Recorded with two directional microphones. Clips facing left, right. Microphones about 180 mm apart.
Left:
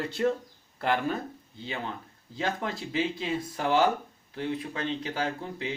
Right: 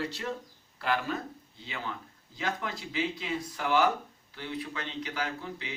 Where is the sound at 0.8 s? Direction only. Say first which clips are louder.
Left 3 dB; 25° left (ahead or behind).